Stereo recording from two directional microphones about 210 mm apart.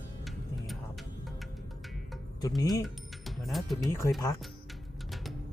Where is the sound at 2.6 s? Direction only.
20° left (ahead or behind).